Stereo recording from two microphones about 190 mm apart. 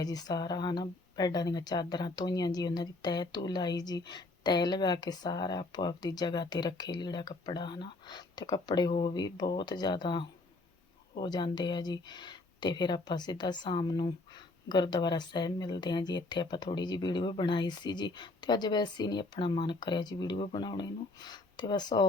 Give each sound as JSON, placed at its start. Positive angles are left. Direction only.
{"t": 0.0, "sound": "speech", "side_deg": 20}